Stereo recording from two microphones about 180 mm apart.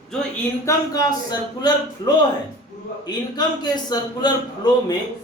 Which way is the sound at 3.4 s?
20° left (ahead or behind).